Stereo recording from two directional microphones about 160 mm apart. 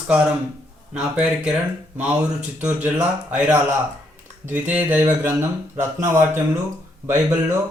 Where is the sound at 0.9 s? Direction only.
5° right (ahead or behind).